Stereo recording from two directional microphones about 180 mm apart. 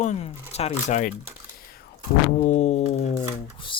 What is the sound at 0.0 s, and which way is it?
Speech, 40° left (ahead or behind).